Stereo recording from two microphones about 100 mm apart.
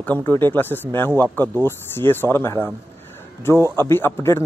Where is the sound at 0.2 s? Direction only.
25° left (ahead or behind).